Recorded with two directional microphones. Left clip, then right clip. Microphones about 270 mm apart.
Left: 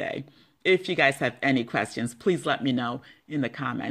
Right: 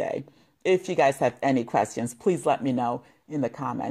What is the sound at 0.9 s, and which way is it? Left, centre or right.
Speech, right.